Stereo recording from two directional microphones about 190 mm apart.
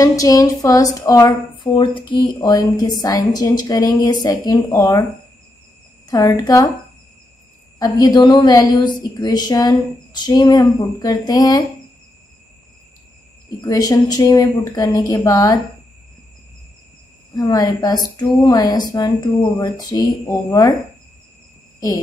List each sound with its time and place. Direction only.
0.0 s speech: 20° left (ahead or behind)
6.0 s speech: 20° left (ahead or behind)
7.8 s speech: 20° left (ahead or behind)
13.6 s speech: 20° left (ahead or behind)
17.4 s speech: 20° left (ahead or behind)
21.7 s a sound: 20° left (ahead or behind)